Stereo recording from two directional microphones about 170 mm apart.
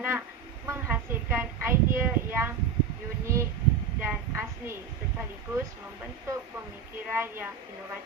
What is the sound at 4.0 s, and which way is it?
Speech, 10° right (ahead or behind).